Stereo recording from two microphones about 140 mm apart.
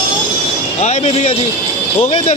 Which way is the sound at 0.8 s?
50° left (ahead or behind).